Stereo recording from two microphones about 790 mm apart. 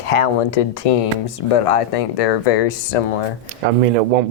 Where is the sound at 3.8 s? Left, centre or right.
Right.